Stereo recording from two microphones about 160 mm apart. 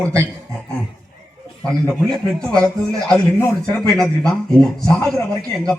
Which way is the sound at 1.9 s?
5° left (ahead or behind).